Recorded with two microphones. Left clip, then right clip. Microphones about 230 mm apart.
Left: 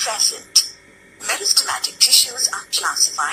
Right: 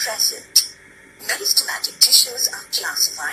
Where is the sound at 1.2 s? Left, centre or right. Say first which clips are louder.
Left 1 dB; centre.